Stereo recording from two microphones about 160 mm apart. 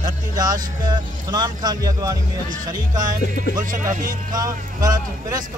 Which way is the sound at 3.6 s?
55° right (ahead or behind).